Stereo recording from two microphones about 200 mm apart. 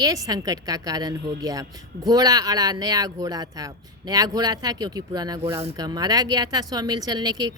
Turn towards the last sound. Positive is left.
turn(degrees=-20)  # may be behind; listen again after turning